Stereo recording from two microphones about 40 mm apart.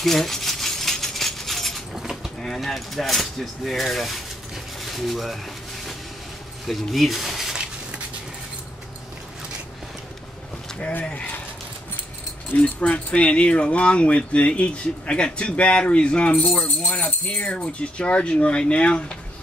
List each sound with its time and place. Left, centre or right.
0.0 s a sound: centre
2.0 s livestock: centre
2.4 s speech: centre
6.7 s speech: centre
10.8 s speech: left
12.8 s speech: left
16.6 s speech: left
17.7 s speech: left